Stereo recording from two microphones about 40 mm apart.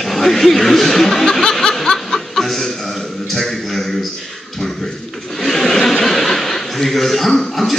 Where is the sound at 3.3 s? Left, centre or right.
Centre.